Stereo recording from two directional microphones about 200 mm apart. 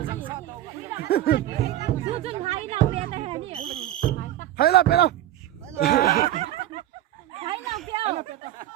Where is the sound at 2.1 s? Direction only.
30° right (ahead or behind).